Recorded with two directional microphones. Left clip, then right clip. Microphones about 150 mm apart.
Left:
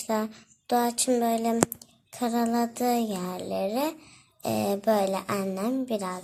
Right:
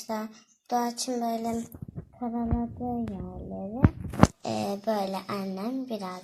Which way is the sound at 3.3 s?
40° left (ahead or behind).